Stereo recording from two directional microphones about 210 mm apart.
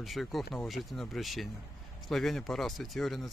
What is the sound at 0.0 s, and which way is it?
Speech, centre (ahead or behind).